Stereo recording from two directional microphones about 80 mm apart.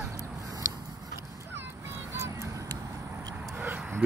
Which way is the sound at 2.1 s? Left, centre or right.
Right.